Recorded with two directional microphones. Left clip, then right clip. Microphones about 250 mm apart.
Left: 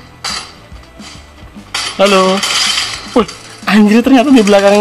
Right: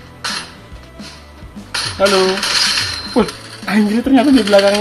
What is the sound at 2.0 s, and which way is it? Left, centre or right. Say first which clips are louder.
Cutlery: left 4 dB; left.